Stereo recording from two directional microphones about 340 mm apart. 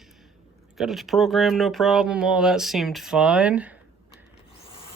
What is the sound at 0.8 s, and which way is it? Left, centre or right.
Speech, centre.